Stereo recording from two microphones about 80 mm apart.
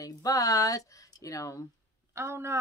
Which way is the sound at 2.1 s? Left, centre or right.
Right.